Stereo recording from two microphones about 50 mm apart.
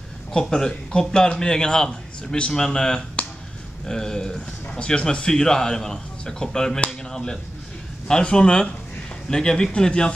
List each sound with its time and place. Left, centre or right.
0.3 s a man's voice: centre